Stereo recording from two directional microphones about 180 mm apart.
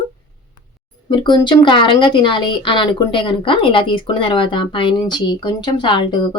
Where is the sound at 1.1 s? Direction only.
25° left (ahead or behind).